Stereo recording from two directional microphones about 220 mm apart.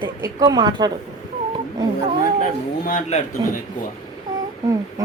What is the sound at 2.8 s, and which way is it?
Speech, 35° left (ahead or behind).